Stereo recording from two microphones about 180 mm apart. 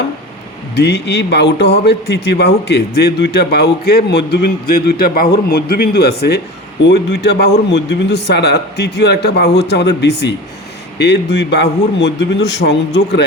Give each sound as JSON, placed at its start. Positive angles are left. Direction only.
{"t": 0.8, "sound": "a man's voice", "side_deg": 70}